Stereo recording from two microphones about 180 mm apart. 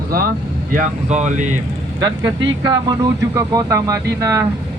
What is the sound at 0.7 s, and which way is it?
Speech, 40° right (ahead or behind).